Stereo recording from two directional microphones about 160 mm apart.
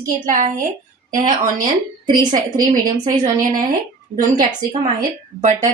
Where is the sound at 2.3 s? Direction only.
55° right (ahead or behind).